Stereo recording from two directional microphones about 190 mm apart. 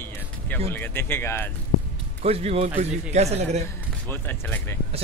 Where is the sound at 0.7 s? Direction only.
10° left (ahead or behind).